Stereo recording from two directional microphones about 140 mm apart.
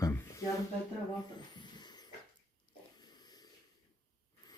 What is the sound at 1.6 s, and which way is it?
Vehicle, 30° left (ahead or behind).